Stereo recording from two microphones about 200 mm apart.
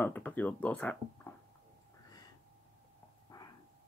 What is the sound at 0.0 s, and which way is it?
Speech, 10° left (ahead or behind).